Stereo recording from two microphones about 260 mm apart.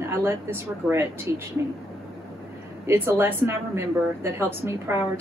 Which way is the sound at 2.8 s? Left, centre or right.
Centre.